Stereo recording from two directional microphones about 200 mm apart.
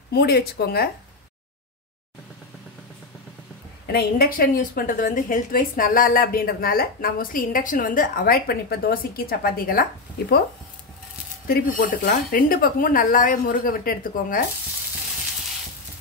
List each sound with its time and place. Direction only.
0.1 s a woman's voice: 50° left (ahead or behind)
3.8 s a woman's voice: 50° left (ahead or behind)
11.4 s a woman's voice: 50° left (ahead or behind)